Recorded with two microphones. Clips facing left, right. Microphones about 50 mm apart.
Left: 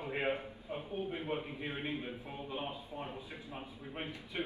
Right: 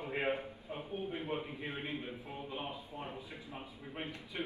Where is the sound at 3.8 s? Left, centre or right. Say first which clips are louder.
Even; centre.